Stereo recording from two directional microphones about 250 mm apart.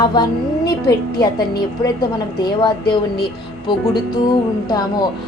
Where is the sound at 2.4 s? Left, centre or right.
Centre.